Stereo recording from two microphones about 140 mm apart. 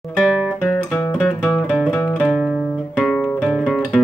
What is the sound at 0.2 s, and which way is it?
Guitar, 5° right (ahead or behind).